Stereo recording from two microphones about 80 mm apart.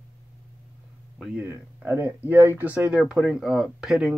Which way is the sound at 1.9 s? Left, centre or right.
Right.